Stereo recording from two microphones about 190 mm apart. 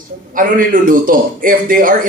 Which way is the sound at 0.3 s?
45° right (ahead or behind).